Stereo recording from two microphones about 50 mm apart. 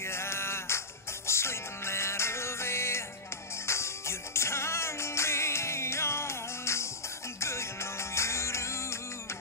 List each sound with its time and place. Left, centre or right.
0.1 s music: left